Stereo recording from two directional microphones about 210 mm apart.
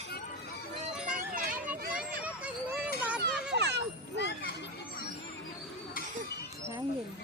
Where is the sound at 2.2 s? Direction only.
5° right (ahead or behind).